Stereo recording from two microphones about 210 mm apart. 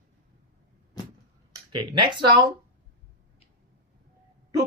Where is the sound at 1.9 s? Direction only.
20° right (ahead or behind).